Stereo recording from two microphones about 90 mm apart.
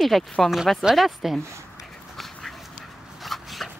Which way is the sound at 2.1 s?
Centre (ahead or behind).